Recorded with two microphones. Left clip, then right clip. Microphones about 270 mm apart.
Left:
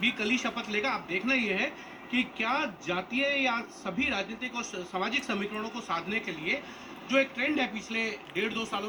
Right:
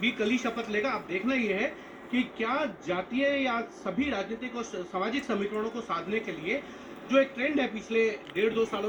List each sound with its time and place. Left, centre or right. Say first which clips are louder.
0.0 s a man's voice: even; left